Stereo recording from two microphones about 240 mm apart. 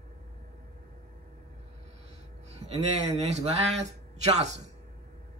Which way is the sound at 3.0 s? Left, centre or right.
Right.